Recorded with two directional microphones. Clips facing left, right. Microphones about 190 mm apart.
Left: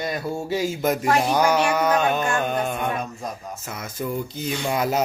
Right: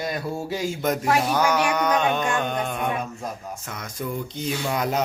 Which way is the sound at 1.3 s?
10° left (ahead or behind).